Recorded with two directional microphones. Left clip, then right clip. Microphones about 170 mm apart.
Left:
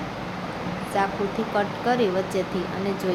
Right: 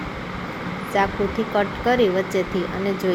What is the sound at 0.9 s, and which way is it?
Speech, 10° right (ahead or behind).